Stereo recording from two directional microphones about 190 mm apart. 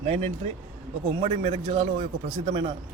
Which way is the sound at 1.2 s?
35° right (ahead or behind).